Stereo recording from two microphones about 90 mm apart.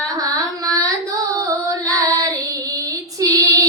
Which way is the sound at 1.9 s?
40° right (ahead or behind).